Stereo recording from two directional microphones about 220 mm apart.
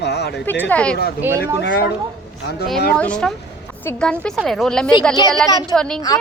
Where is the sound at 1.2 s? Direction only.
10° right (ahead or behind).